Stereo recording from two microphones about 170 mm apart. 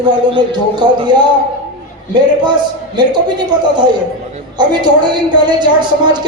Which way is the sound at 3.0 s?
25° right (ahead or behind).